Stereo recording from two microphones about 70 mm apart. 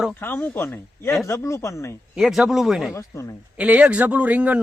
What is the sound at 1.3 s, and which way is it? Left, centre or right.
Speech, left.